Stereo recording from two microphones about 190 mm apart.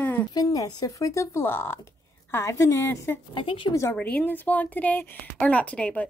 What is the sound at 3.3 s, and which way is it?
Speech, 25° left (ahead or behind).